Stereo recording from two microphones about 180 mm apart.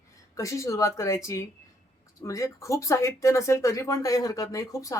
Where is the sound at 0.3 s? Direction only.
15° left (ahead or behind).